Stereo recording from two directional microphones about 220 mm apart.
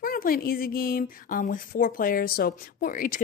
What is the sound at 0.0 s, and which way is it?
Speech, 40° left (ahead or behind).